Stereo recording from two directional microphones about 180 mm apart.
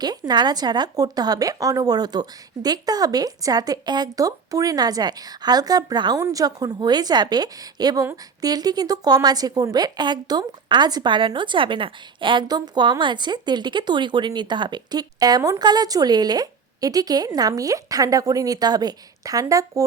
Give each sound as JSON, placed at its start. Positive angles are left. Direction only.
{"t": 0.0, "sound": "a woman's voice", "side_deg": -20}